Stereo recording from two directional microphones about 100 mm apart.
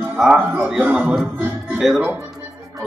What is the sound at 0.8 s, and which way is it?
Speech, 15° right (ahead or behind).